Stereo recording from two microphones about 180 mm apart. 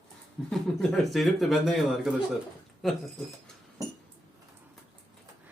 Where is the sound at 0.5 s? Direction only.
Centre (ahead or behind).